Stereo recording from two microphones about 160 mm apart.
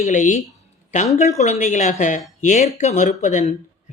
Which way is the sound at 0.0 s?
50° left (ahead or behind).